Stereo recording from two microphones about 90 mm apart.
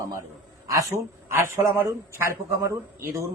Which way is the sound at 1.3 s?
30° right (ahead or behind).